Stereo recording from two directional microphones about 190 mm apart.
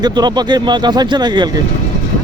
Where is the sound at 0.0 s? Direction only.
20° right (ahead or behind).